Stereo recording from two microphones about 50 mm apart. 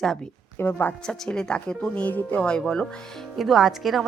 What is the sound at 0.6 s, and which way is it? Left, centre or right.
Speech, left.